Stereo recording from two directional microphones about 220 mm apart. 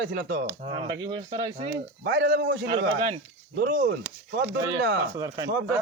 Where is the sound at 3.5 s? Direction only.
40° right (ahead or behind).